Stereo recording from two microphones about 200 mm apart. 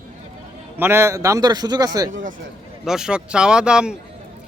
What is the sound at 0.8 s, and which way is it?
Speech, 10° right (ahead or behind).